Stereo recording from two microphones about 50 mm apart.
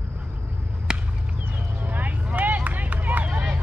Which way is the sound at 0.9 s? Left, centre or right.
Centre.